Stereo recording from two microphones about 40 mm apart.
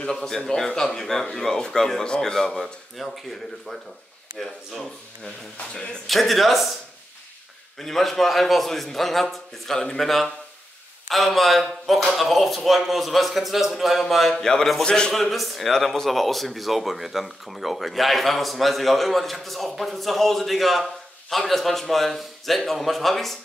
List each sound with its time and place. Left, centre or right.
0.0 s speech: centre
6.0 s speech: centre
7.8 s speech: centre
14.3 s a man's voice: centre
15.1 s speech: centre